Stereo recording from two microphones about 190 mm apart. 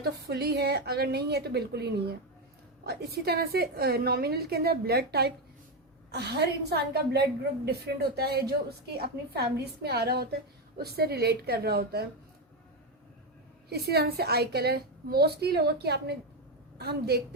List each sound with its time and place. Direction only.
0.0 s a woman's voice: 55° right (ahead or behind)
13.7 s a woman's voice: 55° right (ahead or behind)